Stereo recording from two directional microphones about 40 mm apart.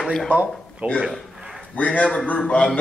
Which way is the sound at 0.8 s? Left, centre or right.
Right.